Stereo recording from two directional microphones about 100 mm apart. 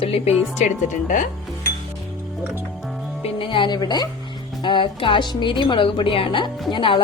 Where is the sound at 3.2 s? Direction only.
60° left (ahead or behind); by 4.1 s 45° left (ahead or behind).